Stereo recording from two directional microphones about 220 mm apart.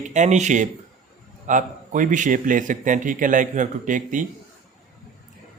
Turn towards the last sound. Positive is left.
turn(degrees=-35)  # may be behind; listen again after turning